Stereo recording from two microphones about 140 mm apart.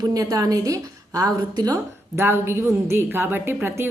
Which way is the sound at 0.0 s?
25° right (ahead or behind).